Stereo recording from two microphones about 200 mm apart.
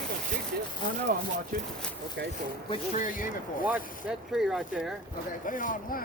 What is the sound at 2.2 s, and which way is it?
Speech, 65° right (ahead or behind).